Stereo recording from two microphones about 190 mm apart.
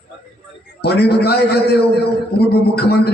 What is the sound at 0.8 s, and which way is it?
A man's voice, 60° left (ahead or behind).